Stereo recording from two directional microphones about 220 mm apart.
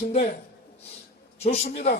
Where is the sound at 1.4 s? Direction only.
30° left (ahead or behind).